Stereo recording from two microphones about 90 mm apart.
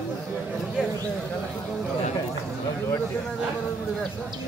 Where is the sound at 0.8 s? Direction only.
5° right (ahead or behind).